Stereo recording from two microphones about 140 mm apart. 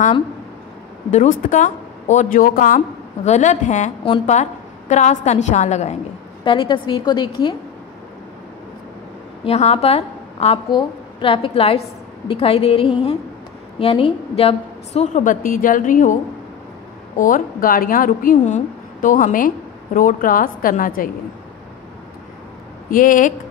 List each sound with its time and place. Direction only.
1.1 s a woman's voice: 60° left (ahead or behind)
3.3 s a woman's voice: 60° left (ahead or behind)
6.4 s a woman's voice: 35° left (ahead or behind)
9.4 s a woman's voice: 50° left (ahead or behind)
10.7 s a woman's voice: 35° left (ahead or behind); by 15.3 s 55° left (ahead or behind)
15.4 s a woman's voice: 75° left (ahead or behind)
17.2 s a woman's voice: 75° left (ahead or behind)
22.8 s a woman's voice: 75° left (ahead or behind)